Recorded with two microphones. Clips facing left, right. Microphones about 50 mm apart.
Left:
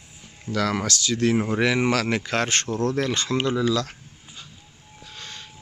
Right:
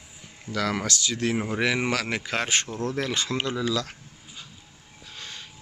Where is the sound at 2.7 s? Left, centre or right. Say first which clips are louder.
Left 6 dB; left.